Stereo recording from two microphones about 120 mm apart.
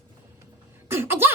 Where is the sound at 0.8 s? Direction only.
20° right (ahead or behind).